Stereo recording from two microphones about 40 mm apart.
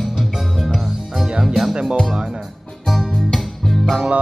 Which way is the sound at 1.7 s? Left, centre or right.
Right.